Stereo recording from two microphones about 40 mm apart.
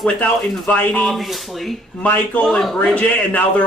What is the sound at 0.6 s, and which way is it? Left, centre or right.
Speech, left.